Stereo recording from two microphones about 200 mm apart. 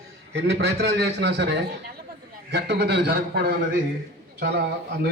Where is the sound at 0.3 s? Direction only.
60° right (ahead or behind).